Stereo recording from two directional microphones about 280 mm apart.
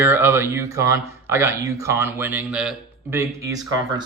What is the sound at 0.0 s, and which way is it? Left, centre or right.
A man's voice, centre.